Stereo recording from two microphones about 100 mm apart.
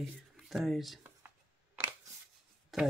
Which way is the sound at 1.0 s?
20° right (ahead or behind).